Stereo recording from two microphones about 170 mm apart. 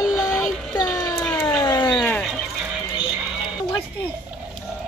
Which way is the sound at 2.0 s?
10° left (ahead or behind).